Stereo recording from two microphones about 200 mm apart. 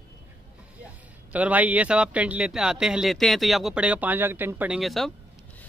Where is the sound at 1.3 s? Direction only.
5° right (ahead or behind).